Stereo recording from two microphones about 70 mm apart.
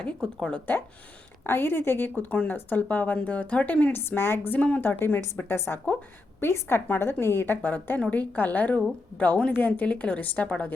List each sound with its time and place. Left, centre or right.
0.0 s speech: centre
1.5 s a woman's voice: left